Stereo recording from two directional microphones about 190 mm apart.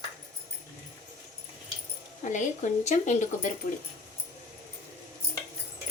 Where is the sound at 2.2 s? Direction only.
40° left (ahead or behind).